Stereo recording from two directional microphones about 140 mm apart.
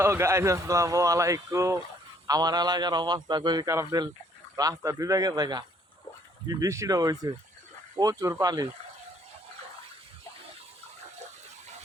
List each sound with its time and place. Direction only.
0.0 s speech: 20° right (ahead or behind)